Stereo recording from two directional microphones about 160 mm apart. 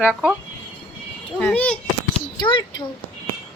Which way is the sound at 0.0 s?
5° right (ahead or behind).